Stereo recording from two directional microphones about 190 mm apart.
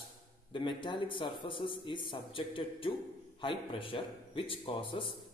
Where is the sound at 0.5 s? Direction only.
25° left (ahead or behind).